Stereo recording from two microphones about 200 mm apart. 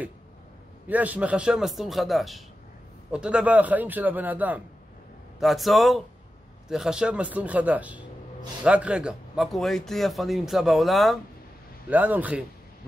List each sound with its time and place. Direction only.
0.8 s a man's voice: 10° right (ahead or behind)